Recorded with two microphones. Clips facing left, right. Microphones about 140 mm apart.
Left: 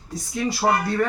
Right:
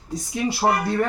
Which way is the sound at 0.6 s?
20° right (ahead or behind).